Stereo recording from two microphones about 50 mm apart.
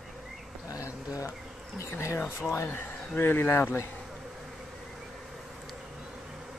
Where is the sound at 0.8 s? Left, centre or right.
Left.